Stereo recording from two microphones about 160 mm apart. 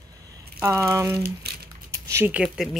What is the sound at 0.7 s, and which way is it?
Speech, 20° right (ahead or behind).